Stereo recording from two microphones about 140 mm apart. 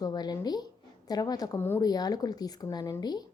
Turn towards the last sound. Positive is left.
turn(degrees=30)  # may be behind; listen again after turning